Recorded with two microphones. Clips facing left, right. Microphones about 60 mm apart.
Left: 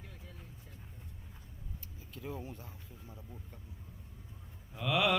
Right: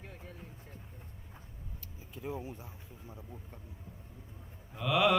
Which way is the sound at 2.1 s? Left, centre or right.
Centre.